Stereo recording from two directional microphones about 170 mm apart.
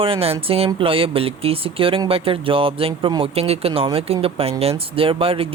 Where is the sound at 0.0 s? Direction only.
35° right (ahead or behind).